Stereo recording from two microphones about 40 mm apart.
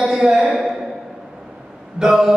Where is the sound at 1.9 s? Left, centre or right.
Centre.